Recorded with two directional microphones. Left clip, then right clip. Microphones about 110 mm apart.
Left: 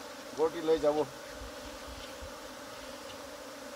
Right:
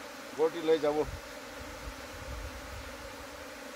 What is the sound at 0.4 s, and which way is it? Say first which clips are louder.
Speech: right 1 dB; 5° left (ahead or behind).